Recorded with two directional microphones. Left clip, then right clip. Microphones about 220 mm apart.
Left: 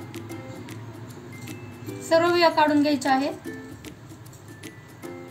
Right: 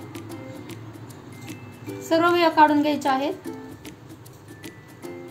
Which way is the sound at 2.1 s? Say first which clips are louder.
Even; 15° right (ahead or behind).